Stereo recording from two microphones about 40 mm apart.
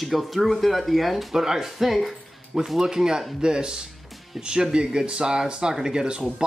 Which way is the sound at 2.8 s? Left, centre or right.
Centre.